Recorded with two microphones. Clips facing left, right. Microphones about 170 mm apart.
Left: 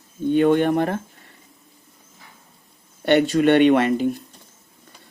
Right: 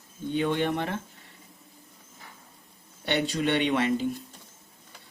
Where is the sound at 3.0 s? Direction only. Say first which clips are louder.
Left 10 dB; 55° left (ahead or behind).